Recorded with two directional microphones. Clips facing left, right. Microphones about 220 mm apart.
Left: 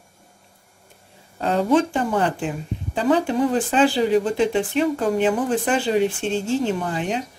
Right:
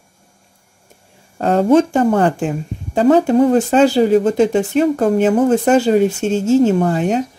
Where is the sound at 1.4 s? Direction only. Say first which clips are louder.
Right 6 dB; 50° right (ahead or behind).